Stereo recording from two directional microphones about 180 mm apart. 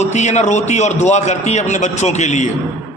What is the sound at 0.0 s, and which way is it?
A man's voice, 40° left (ahead or behind).